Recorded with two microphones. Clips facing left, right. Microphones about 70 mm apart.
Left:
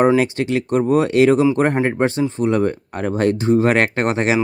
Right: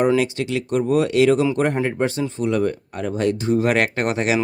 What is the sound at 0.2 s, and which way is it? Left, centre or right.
Speech, left.